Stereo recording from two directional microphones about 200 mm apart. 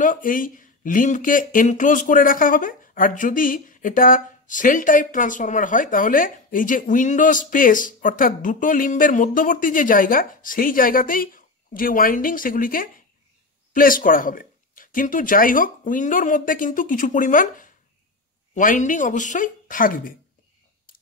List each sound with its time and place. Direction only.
0.0 s speech: 40° left (ahead or behind)